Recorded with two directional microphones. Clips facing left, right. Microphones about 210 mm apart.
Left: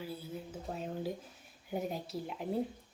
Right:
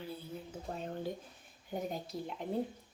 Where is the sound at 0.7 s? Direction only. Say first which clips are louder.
Left 1 dB; 5° left (ahead or behind).